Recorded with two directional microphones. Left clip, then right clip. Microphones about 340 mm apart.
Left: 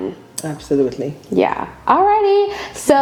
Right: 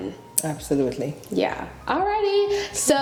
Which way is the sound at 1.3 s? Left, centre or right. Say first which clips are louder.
Left 8 dB; left.